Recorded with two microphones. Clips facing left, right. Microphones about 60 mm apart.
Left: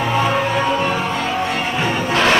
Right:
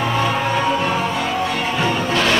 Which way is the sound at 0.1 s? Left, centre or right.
Centre.